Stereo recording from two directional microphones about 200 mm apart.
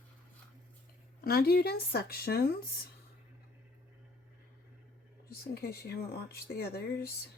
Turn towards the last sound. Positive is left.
turn(degrees=50)  # may be behind; listen again after turning